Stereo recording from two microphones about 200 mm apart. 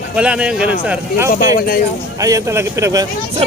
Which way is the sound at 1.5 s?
50° left (ahead or behind).